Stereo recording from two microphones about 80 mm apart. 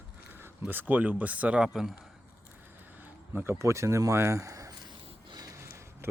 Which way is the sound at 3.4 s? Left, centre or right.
Right.